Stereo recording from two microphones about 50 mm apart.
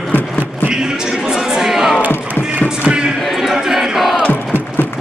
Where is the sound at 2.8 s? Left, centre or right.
Centre.